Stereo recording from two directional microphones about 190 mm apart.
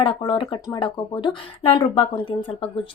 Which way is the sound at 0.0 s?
25° left (ahead or behind).